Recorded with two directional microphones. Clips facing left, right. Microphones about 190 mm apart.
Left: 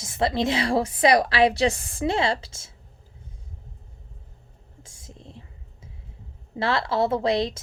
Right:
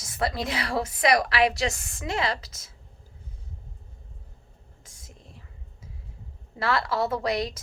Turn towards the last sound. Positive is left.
turn(degrees=25)  # may be behind; listen again after turning